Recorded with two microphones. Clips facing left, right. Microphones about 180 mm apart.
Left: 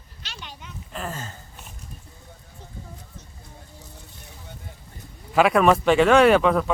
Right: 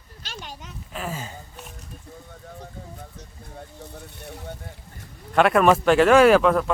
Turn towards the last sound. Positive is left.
turn(degrees=0)  # may be behind; listen again after turning